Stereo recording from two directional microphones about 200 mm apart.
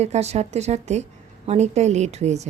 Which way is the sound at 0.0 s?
35° right (ahead or behind).